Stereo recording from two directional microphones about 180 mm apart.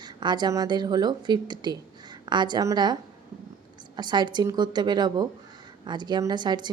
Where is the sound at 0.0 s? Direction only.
25° right (ahead or behind).